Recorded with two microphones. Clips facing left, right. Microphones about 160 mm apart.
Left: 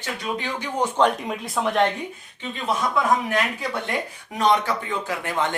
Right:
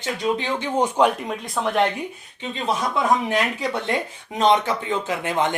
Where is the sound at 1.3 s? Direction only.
Centre (ahead or behind).